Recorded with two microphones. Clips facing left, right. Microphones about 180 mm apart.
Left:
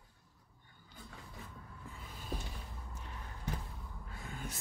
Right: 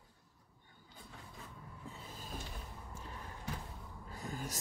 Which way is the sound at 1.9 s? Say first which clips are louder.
Right 1 dB; 35° right (ahead or behind).